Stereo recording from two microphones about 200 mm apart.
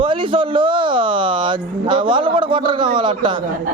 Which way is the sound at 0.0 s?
25° right (ahead or behind).